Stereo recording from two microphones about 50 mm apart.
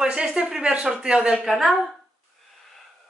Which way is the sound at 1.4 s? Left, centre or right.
Centre.